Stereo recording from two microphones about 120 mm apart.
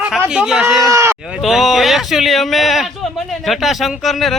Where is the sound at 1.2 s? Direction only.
5° right (ahead or behind).